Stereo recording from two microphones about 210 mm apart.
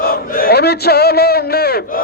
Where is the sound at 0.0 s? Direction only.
45° left (ahead or behind).